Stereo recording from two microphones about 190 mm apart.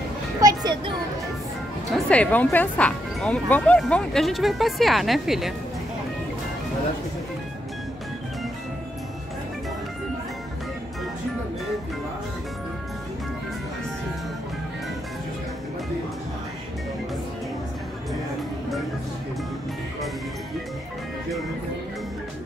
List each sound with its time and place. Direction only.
0.4 s children playing: 20° right (ahead or behind)
1.9 s speech: 5° left (ahead or behind)